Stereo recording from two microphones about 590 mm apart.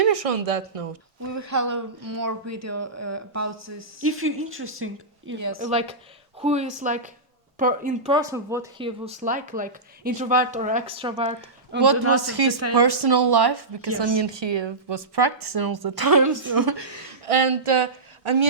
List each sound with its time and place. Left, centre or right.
0.0 s speech: right
1.3 s speech: right
5.5 s speech: centre
12.2 s a woman's voice: right
17.2 s speech: right